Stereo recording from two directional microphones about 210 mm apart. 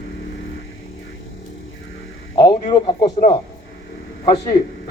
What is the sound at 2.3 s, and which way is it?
Speech, 20° left (ahead or behind).